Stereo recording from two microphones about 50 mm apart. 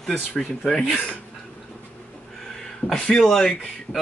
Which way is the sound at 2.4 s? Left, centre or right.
Centre.